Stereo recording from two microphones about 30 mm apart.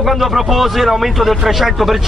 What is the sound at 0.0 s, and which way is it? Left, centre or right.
Speech, centre.